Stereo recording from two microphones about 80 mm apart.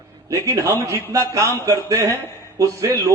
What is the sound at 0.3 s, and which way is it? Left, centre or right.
A man's voice, right.